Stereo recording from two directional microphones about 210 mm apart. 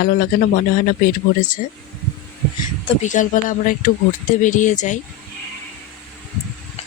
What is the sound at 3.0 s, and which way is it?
Speech, 35° left (ahead or behind).